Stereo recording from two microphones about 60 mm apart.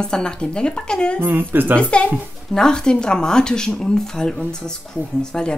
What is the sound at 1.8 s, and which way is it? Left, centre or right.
Speech, centre.